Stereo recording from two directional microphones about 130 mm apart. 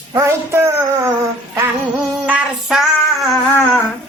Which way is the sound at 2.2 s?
10° right (ahead or behind).